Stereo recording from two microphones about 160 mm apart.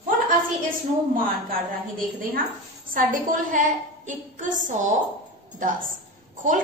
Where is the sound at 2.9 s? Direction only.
55° right (ahead or behind).